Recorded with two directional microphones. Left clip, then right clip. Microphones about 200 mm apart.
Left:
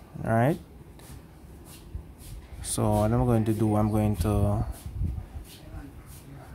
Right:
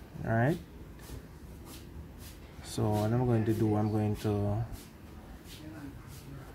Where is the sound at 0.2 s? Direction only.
20° left (ahead or behind).